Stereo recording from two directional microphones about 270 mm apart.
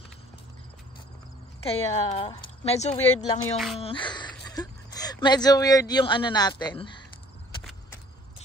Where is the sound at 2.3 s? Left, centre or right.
Centre.